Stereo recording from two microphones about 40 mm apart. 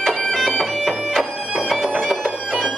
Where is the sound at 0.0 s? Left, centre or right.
Centre.